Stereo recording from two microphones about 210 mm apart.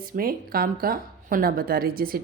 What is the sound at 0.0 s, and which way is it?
A woman's voice, 45° right (ahead or behind).